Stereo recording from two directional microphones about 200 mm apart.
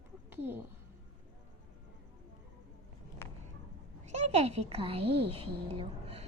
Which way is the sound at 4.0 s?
35° right (ahead or behind).